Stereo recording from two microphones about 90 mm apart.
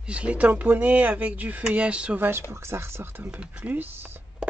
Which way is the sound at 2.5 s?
30° right (ahead or behind).